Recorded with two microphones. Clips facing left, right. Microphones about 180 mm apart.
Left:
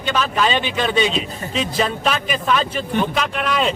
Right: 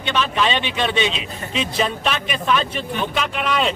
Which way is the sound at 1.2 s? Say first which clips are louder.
Left 3 dB; 40° left (ahead or behind).